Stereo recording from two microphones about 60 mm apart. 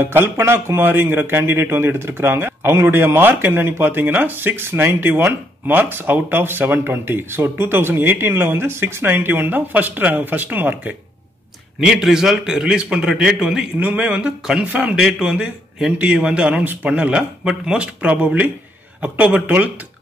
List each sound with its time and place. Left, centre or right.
0.0 s speech: right
11.8 s a man's voice: centre
13.7 s speech: right
15.0 s a man's voice: centre